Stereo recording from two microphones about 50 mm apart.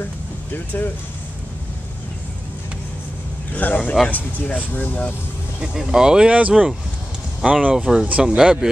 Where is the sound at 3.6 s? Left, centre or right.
Left.